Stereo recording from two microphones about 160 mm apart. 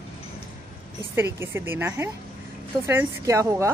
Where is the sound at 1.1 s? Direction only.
15° right (ahead or behind).